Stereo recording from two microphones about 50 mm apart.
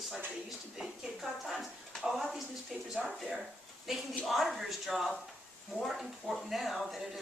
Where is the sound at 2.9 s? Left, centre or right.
Centre.